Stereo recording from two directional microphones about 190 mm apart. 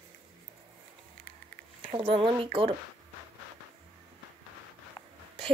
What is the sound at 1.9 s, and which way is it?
Speech, 25° right (ahead or behind).